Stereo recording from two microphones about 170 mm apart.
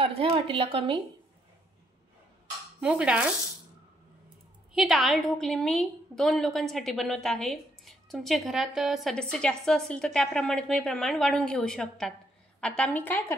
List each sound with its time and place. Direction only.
0.0 s a woman's voice: 35° right (ahead or behind)
2.8 s a woman's voice: 5° right (ahead or behind)
4.7 s a woman's voice: centre (ahead or behind)